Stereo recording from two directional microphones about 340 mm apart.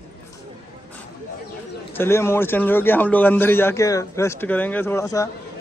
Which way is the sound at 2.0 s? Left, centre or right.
Centre.